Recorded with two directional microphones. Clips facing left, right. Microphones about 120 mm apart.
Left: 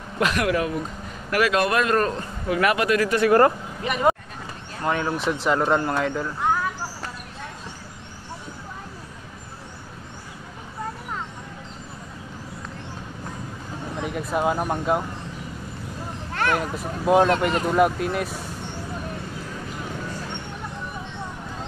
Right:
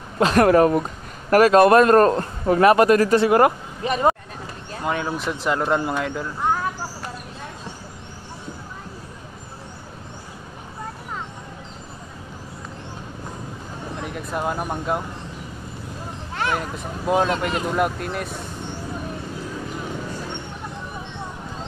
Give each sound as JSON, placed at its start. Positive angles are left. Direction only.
{"t": 0.2, "sound": "a man's voice", "side_deg": -40}
{"t": 3.2, "sound": "speech", "side_deg": -15}
{"t": 3.8, "sound": "speech", "side_deg": -30}
{"t": 4.8, "sound": "speech", "side_deg": 0}
{"t": 13.9, "sound": "speech", "side_deg": 0}
{"t": 16.5, "sound": "speech", "side_deg": 5}